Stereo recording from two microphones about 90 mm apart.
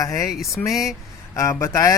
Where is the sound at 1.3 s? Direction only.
35° left (ahead or behind).